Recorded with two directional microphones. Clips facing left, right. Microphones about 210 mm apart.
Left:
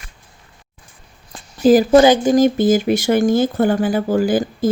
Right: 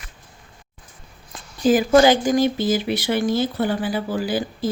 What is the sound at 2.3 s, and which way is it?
Speech, 45° left (ahead or behind).